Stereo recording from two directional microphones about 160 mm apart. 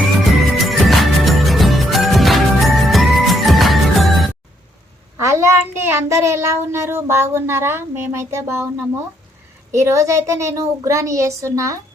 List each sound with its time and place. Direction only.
0.3 s music: centre (ahead or behind)
5.2 s a child's voice: 15° right (ahead or behind)
9.7 s a woman's voice: 15° right (ahead or behind)